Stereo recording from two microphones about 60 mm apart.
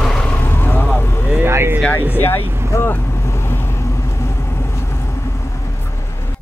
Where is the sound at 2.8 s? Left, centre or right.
Left.